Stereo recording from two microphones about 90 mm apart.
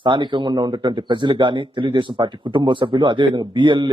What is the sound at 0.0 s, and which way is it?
Speech, 60° right (ahead or behind).